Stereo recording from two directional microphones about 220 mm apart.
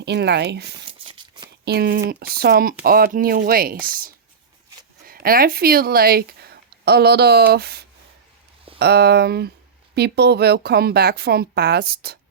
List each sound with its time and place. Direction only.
0.0 s speech: 50° right (ahead or behind)
1.0 s a sound: 20° right (ahead or behind)
1.6 s speech: 45° right (ahead or behind)